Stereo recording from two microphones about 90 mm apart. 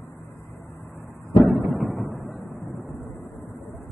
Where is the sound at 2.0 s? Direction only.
Centre (ahead or behind).